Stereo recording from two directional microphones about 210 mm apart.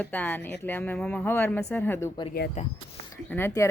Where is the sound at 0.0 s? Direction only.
10° left (ahead or behind).